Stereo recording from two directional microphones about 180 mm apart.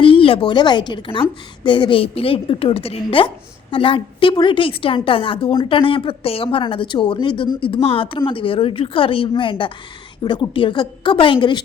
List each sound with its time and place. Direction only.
0.0 s a woman's voice: 30° left (ahead or behind)